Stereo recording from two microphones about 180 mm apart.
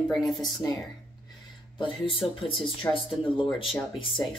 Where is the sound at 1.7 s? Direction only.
30° left (ahead or behind).